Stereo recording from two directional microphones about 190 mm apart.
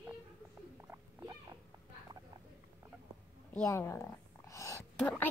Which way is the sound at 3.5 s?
10° left (ahead or behind).